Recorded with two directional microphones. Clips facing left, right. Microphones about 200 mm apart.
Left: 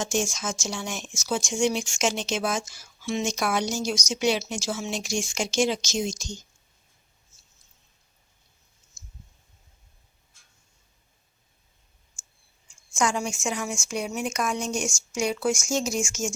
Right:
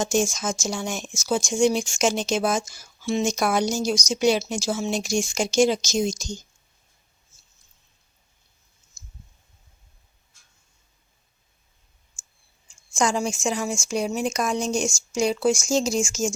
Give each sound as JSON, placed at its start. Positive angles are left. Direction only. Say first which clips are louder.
{"t": 0.0, "sound": "speech", "louder": "right 4 dB", "side_deg": -40}
{"t": 12.9, "sound": "speech", "louder": "right 3 dB", "side_deg": -35}